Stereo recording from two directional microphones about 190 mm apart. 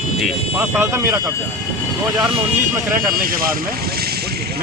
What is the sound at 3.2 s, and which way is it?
Vehicle, 50° right (ahead or behind).